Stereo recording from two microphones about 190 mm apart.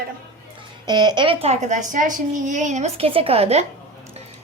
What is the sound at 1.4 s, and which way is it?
A child's voice, 35° right (ahead or behind).